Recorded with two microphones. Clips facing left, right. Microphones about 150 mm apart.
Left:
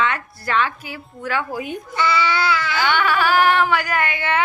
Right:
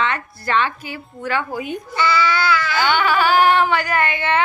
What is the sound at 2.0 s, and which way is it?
Speech, 25° left (ahead or behind).